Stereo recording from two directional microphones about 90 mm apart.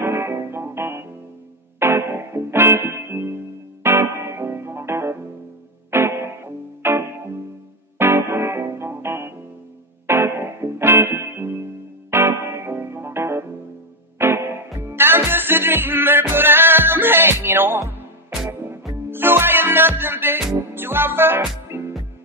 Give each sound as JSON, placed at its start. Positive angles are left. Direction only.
{"t": 0.0, "sound": "music", "side_deg": -30}
{"t": 19.0, "sound": "music", "side_deg": -25}